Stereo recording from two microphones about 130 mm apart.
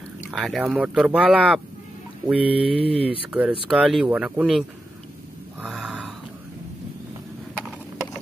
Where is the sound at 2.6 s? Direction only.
45° right (ahead or behind).